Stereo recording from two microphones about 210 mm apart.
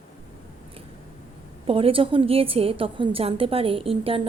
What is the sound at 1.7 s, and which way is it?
A woman's voice, 25° right (ahead or behind).